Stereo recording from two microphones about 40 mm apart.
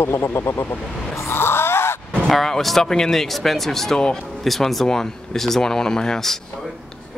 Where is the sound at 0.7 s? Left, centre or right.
Left.